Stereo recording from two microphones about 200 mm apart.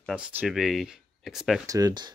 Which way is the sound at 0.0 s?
5° right (ahead or behind).